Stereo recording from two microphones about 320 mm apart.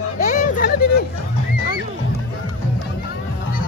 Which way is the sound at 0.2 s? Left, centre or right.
Left.